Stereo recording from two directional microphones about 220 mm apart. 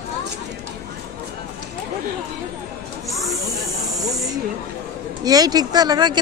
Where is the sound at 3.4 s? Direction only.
15° right (ahead or behind).